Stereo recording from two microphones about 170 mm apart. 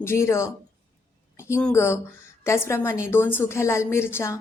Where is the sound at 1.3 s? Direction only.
15° left (ahead or behind).